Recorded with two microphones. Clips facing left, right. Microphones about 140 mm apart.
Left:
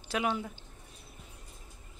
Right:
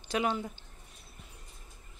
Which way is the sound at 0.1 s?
5° left (ahead or behind).